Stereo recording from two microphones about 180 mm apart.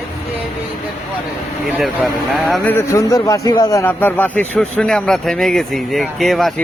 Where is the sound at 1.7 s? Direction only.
Centre (ahead or behind).